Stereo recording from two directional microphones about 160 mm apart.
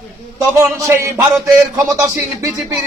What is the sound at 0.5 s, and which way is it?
Speech, 15° right (ahead or behind).